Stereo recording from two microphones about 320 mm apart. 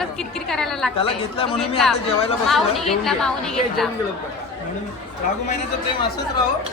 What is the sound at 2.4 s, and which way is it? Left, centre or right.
A woman's voice, centre.